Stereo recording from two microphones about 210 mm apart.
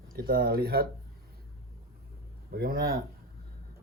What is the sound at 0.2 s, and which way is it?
Speech, 45° right (ahead or behind).